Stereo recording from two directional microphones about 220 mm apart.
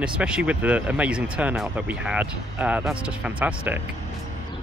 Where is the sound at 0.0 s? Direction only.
5° right (ahead or behind).